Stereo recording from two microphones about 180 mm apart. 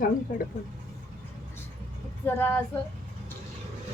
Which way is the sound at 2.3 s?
10° left (ahead or behind).